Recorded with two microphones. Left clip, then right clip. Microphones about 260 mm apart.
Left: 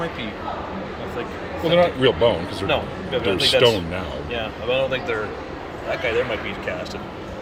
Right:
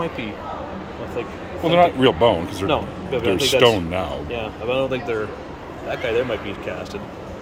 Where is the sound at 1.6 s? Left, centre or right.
Centre.